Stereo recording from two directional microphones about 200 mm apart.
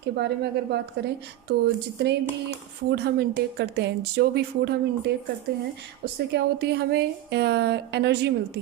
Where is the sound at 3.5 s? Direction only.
55° right (ahead or behind).